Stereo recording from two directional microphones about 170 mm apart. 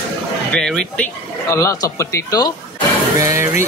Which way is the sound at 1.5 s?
15° left (ahead or behind).